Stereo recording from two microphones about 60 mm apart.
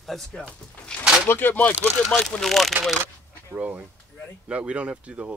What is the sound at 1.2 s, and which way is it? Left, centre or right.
Speech, left.